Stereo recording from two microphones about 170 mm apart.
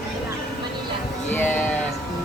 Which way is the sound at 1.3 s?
10° left (ahead or behind).